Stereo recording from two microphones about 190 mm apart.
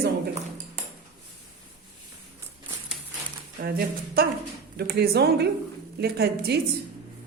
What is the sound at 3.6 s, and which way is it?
A woman's voice, 50° right (ahead or behind).